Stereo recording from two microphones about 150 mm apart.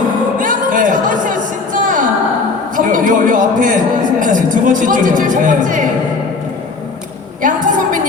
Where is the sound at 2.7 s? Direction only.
65° right (ahead or behind).